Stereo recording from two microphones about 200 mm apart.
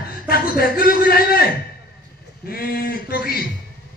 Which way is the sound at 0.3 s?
50° left (ahead or behind).